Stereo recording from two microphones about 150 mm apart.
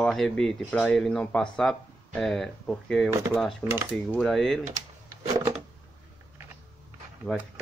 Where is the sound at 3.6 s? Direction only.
15° left (ahead or behind).